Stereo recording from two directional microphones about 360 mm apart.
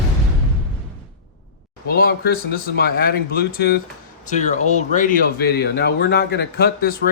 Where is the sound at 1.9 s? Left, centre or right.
Left.